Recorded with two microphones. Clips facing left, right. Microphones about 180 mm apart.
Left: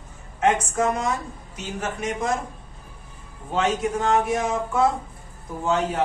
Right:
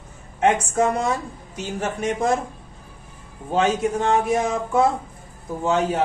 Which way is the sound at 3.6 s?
30° right (ahead or behind).